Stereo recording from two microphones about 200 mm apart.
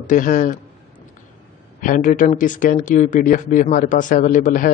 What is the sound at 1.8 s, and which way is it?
Speech, 40° left (ahead or behind).